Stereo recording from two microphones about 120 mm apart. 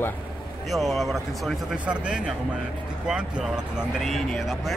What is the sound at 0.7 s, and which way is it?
Speech, centre (ahead or behind).